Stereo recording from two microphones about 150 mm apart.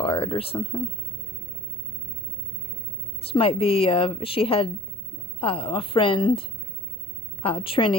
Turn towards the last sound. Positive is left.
turn(degrees=35)  # may be behind; listen again after turning